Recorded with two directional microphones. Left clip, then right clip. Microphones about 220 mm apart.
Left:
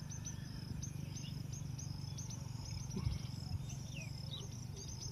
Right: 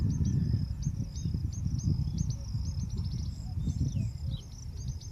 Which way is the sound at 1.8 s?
35° left (ahead or behind).